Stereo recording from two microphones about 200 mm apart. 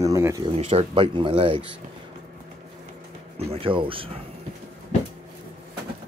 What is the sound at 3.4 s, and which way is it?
Speech, 30° right (ahead or behind).